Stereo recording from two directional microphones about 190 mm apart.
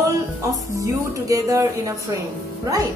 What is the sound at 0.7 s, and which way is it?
A woman's voice, 15° right (ahead or behind).